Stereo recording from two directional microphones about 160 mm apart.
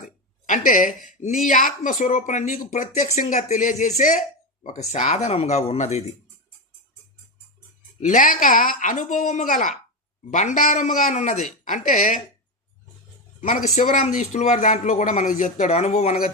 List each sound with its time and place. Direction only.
0.0 s a sound: 50° left (ahead or behind)
1.0 s speech: 55° left (ahead or behind)
8.0 s a woman's voice: 55° left (ahead or behind)
13.4 s speech: 55° left (ahead or behind)